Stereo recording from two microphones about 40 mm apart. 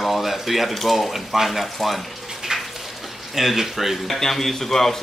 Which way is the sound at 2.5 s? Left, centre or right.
Centre.